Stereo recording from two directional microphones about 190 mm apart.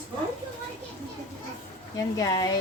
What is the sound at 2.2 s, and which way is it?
Speech, 20° left (ahead or behind).